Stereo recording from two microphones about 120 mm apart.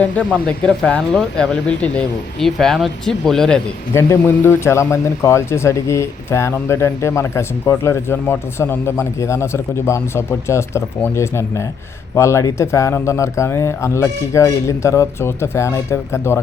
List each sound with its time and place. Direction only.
0.0 s speech: 10° left (ahead or behind)
3.9 s a man's voice: 20° left (ahead or behind)